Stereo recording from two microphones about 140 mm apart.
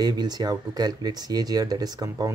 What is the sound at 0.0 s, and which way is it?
Speech, 30° right (ahead or behind).